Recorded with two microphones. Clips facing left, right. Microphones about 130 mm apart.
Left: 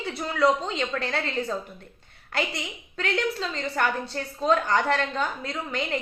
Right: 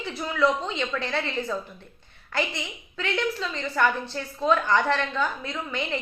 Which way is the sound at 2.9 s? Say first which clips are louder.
Left 1 dB; 35° left (ahead or behind).